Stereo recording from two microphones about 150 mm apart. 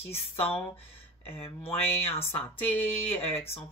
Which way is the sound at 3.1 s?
40° left (ahead or behind).